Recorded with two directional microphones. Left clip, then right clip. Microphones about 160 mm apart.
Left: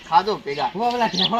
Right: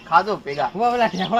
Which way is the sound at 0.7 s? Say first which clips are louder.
Right 3 dB; 10° right (ahead or behind).